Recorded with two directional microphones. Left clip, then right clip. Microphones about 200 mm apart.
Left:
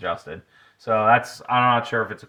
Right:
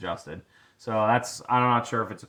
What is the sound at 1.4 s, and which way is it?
Speech, 40° left (ahead or behind).